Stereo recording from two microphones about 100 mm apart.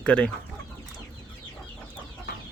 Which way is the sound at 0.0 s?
10° left (ahead or behind).